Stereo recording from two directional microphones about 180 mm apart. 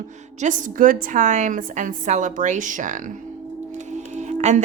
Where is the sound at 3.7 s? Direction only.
40° right (ahead or behind).